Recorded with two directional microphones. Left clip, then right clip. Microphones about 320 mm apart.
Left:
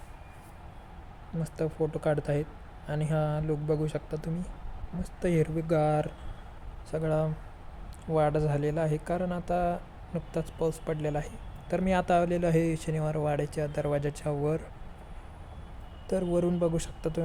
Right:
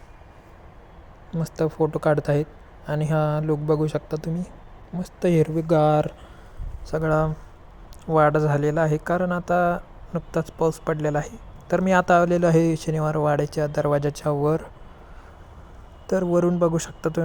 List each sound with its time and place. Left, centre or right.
1.4 s speech: centre
16.0 s speech: centre